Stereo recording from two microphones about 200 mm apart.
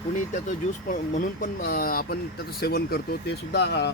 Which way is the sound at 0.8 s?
45° left (ahead or behind).